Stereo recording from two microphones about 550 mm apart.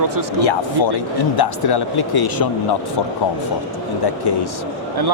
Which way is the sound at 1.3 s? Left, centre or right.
Left.